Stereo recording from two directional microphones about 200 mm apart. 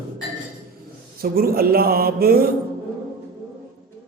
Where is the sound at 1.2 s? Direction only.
50° right (ahead or behind).